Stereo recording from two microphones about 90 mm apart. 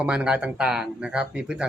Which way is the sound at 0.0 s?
10° right (ahead or behind).